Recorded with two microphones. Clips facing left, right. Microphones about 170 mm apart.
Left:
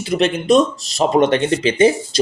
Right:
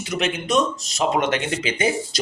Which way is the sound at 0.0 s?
35° left (ahead or behind).